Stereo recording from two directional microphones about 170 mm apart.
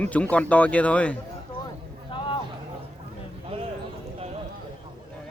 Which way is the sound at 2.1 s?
30° left (ahead or behind).